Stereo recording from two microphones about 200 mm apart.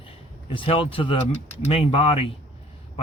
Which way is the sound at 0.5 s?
25° left (ahead or behind).